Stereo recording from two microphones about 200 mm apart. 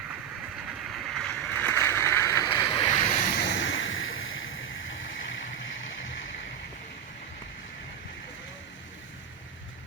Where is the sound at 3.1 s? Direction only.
40° left (ahead or behind).